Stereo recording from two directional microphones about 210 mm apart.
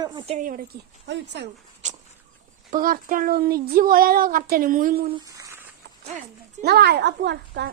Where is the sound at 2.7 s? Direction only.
40° right (ahead or behind).